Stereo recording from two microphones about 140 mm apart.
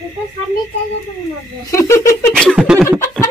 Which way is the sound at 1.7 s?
20° left (ahead or behind).